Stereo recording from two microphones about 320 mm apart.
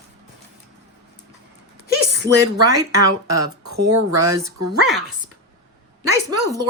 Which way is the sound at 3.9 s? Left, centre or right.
Right.